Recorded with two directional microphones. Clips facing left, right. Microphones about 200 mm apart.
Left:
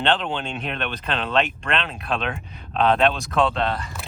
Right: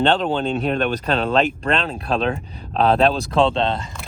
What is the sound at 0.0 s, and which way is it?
Speech, 40° right (ahead or behind).